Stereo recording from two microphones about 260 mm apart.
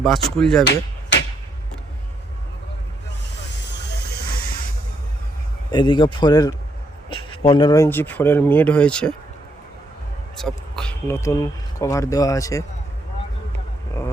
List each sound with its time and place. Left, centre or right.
0.3 s speech: centre
0.6 s hammer: left
5.7 s speech: centre
10.3 s speech: centre